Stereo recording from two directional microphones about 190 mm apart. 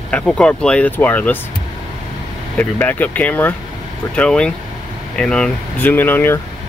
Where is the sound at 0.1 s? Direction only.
5° left (ahead or behind).